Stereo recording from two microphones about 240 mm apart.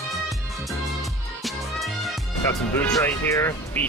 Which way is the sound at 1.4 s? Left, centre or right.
Centre.